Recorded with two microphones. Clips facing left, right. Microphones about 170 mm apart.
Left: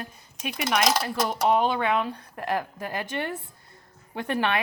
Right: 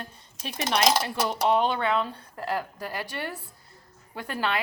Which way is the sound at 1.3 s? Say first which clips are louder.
Left 1 dB; 10° left (ahead or behind).